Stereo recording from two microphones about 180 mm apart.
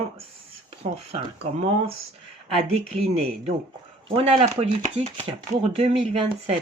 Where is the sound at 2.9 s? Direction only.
35° right (ahead or behind).